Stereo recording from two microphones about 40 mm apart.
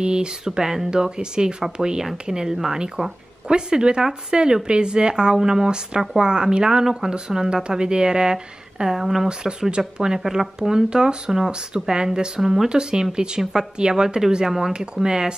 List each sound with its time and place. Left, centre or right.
0.0 s speech: right
0.5 s speech: centre
3.4 s speech: right
12.4 s speech: centre
12.6 s speech: right